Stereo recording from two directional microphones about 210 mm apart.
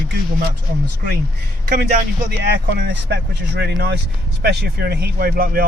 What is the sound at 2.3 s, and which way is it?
Speech, 50° right (ahead or behind).